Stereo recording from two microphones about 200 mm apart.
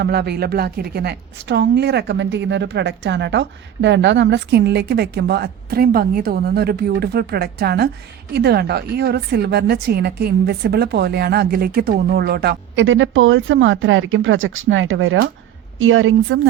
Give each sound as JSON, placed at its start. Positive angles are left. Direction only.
{"t": 0.0, "sound": "a woman's voice", "side_deg": -55}
{"t": 15.8, "sound": "a woman's voice", "side_deg": -85}